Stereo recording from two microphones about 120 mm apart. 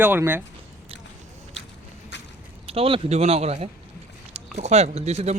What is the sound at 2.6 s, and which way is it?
Speech, 50° right (ahead or behind).